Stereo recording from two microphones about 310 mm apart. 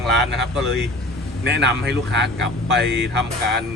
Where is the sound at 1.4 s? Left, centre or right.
Right.